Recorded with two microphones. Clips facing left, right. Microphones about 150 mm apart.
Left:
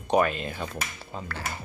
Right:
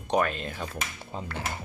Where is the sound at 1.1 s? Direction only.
20° right (ahead or behind).